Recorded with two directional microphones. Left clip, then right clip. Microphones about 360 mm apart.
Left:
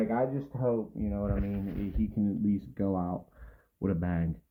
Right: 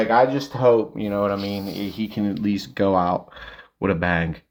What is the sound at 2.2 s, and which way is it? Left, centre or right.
Speech, centre.